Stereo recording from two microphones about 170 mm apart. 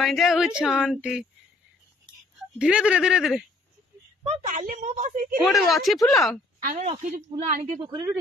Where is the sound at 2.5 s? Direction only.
5° right (ahead or behind).